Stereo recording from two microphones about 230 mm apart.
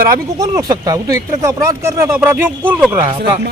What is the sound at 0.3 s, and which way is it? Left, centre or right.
Speech, centre.